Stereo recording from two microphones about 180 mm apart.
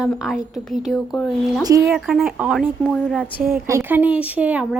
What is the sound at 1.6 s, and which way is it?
Speech, 20° right (ahead or behind).